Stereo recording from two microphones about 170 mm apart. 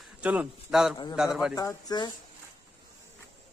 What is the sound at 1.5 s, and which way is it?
Speech, 20° left (ahead or behind).